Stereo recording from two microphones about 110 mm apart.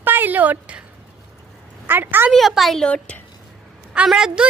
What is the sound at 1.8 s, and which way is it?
Speech, 20° right (ahead or behind).